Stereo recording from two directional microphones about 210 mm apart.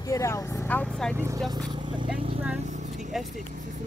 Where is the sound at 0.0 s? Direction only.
15° left (ahead or behind).